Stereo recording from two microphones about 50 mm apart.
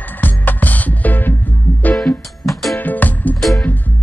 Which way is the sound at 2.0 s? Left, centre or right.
Centre.